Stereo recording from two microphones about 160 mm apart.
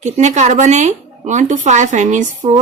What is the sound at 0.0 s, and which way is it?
Speech, 45° right (ahead or behind).